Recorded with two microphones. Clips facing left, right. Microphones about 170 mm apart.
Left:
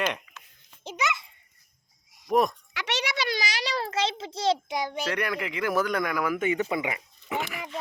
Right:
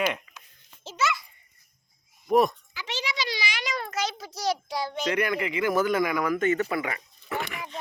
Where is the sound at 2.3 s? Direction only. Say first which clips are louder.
Right 2 dB; centre (ahead or behind).